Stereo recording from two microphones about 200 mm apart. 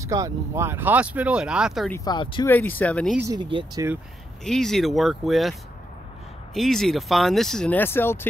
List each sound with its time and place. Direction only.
0.0 s speech: 15° right (ahead or behind)
1.9 s speech: 20° left (ahead or behind)
2.4 s speech: 10° left (ahead or behind)
3.2 s speech: 20° right (ahead or behind)
4.5 s speech: centre (ahead or behind)